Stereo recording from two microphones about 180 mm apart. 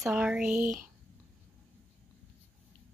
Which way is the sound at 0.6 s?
50° right (ahead or behind).